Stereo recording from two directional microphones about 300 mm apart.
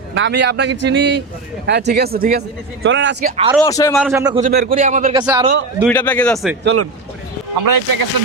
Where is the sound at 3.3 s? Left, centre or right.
Centre.